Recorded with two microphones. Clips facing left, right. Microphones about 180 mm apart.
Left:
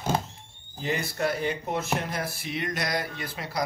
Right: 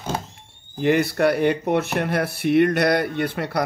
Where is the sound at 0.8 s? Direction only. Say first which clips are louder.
Right 10 dB; 65° right (ahead or behind).